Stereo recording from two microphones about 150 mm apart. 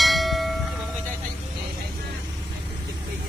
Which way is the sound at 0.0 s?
Centre (ahead or behind).